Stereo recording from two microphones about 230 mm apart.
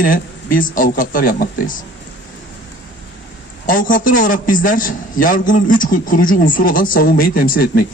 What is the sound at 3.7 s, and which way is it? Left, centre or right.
A man's voice, left.